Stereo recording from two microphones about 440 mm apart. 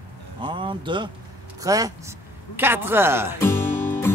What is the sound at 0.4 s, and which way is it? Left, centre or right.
Speech, centre.